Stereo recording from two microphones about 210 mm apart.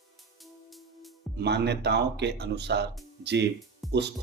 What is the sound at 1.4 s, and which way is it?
Speech, 55° right (ahead or behind).